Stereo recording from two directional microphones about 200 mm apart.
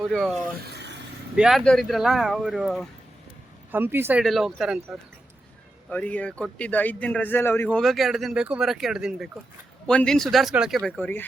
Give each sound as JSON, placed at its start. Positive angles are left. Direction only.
{"t": 0.0, "sound": "a man's voice", "side_deg": 0}
{"t": 0.7, "sound": "a sound", "side_deg": -55}
{"t": 1.4, "sound": "a man's voice", "side_deg": 0}